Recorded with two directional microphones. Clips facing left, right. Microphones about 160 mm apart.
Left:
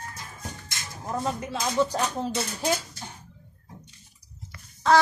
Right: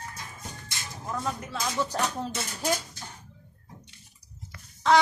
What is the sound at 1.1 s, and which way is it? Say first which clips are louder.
Speech: left 4 dB; 30° left (ahead or behind).